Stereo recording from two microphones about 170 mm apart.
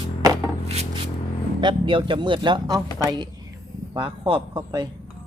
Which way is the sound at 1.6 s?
30° right (ahead or behind).